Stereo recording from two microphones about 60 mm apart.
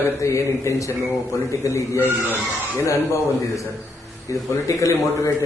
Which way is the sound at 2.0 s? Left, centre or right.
Right.